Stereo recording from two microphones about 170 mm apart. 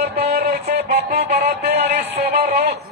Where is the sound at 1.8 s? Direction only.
40° right (ahead or behind).